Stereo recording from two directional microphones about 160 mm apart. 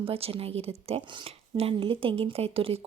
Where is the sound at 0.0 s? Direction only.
35° right (ahead or behind).